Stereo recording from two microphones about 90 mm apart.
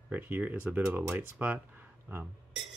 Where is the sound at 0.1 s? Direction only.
20° right (ahead or behind).